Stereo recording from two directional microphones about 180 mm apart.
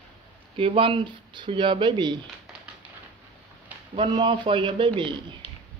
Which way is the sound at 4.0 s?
25° right (ahead or behind).